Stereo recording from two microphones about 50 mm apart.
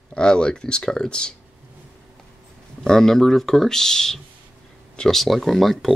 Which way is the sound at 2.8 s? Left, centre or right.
Centre.